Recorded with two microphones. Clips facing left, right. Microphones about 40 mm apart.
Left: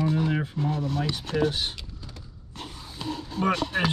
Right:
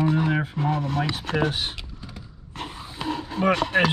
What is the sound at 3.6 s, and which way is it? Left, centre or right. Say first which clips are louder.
Speech: right 6 dB; right.